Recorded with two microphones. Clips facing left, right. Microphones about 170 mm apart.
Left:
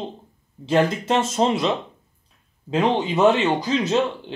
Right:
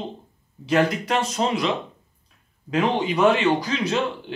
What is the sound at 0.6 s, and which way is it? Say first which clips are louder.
Speech: left 1 dB; 25° left (ahead or behind).